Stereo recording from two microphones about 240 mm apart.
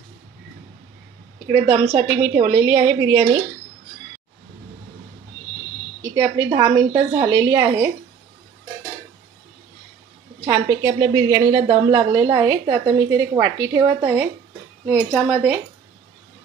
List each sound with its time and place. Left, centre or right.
1.5 s a woman's voice: centre
6.1 s a woman's voice: centre
10.4 s a woman's voice: centre